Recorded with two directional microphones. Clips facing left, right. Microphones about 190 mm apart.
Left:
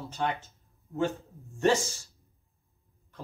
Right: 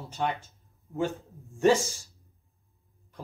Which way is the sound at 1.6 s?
15° right (ahead or behind).